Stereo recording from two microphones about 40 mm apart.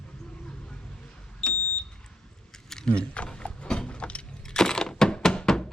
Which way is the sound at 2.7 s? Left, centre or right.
Centre.